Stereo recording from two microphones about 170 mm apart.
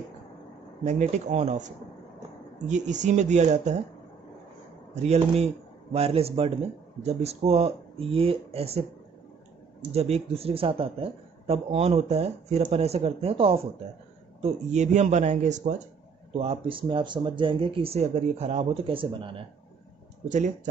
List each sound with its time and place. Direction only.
0.8 s a man's voice: 45° right (ahead or behind)
2.7 s a man's voice: 45° right (ahead or behind)
4.9 s a man's voice: 40° right (ahead or behind)
9.9 s a man's voice: 35° right (ahead or behind)
16.3 s a man's voice: 35° right (ahead or behind)
20.2 s a man's voice: 45° right (ahead or behind)